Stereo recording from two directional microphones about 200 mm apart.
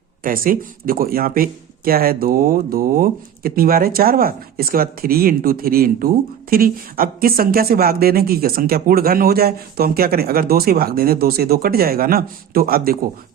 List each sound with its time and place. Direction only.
0.2 s speech: 45° right (ahead or behind)